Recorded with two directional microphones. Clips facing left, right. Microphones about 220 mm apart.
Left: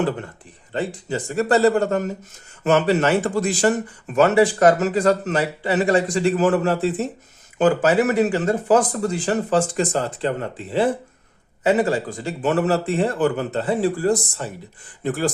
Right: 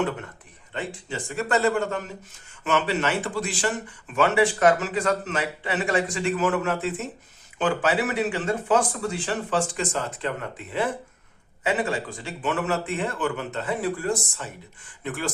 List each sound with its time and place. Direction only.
0.7 s speech: 35° left (ahead or behind)